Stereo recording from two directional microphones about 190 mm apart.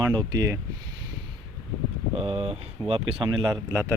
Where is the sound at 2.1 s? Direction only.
30° right (ahead or behind).